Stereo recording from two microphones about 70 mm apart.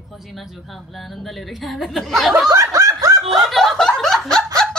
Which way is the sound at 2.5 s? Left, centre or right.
Right.